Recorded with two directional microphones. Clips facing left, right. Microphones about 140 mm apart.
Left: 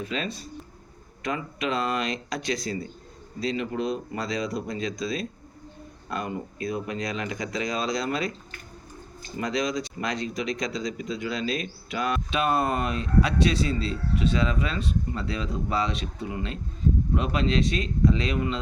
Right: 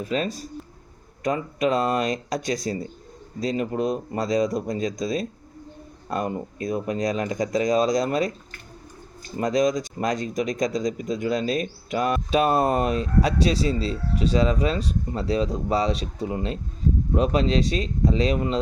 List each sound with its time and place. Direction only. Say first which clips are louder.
0.0 s speech: right 5 dB; 40° right (ahead or behind)
9.4 s speech: right 6 dB; 45° right (ahead or behind)